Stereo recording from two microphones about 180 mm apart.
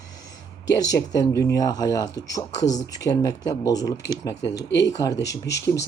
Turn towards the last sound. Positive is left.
turn(degrees=70)  # may be behind; listen again after turning